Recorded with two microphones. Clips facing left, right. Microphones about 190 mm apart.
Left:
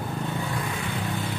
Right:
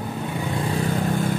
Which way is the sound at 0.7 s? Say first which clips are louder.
Right 7 dB; 40° right (ahead or behind).